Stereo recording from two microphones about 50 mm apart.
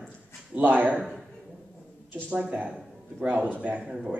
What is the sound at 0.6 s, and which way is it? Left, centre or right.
Speech, right.